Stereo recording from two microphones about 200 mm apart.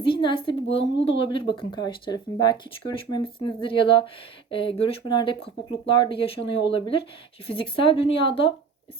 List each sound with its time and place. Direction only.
0.0 s speech: 25° left (ahead or behind)